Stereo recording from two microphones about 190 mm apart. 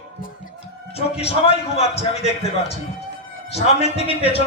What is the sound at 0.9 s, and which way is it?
A man's voice, 30° left (ahead or behind).